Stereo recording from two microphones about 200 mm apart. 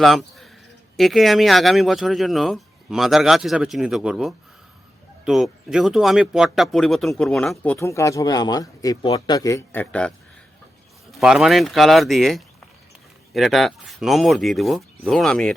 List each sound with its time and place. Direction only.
0.0 s speech: centre (ahead or behind)
11.1 s speech: 5° right (ahead or behind)